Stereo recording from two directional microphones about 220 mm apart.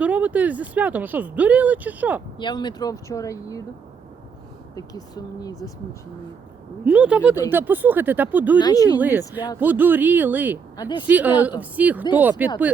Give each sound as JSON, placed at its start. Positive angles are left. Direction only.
{"t": 0.0, "sound": "speech", "side_deg": -5}
{"t": 2.4, "sound": "speech", "side_deg": 20}
{"t": 4.7, "sound": "speech", "side_deg": 15}
{"t": 6.8, "sound": "speech", "side_deg": -5}
{"t": 8.5, "sound": "speech", "side_deg": 15}
{"t": 9.0, "sound": "speech", "side_deg": -10}
{"t": 10.8, "sound": "speech", "side_deg": 20}
{"t": 11.0, "sound": "speech", "side_deg": -5}